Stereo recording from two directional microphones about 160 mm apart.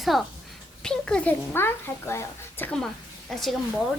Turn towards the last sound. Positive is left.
turn(degrees=0)  # may be behind; listen again after turning